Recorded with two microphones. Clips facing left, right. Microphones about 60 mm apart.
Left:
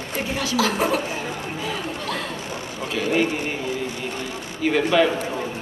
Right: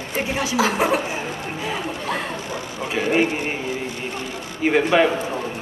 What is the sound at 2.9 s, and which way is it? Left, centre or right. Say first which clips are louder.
Speech: right 2 dB; right.